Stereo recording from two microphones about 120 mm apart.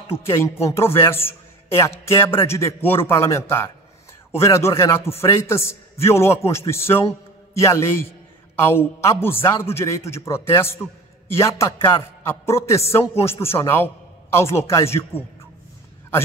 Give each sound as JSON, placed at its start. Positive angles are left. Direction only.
{"t": 0.2, "sound": "a man's voice", "side_deg": 20}